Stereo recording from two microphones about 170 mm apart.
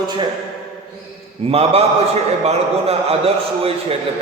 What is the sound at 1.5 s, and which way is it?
A man's voice, 35° right (ahead or behind).